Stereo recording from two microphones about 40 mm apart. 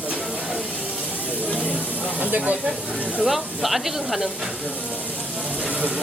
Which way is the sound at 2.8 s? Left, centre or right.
Left.